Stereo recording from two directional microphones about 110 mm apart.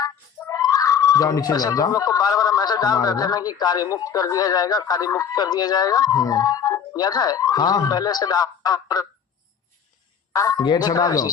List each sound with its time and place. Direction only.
0.0 s speech: 35° left (ahead or behind)
10.3 s a sound: 30° left (ahead or behind)
10.7 s speech: 40° left (ahead or behind)